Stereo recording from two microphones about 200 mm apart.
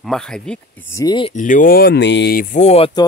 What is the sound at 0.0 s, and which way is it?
Speech, 5° left (ahead or behind).